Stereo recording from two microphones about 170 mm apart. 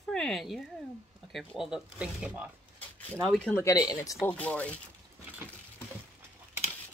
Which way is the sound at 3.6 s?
20° left (ahead or behind).